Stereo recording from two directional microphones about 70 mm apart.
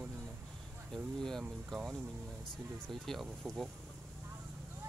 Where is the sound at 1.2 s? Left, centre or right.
Centre.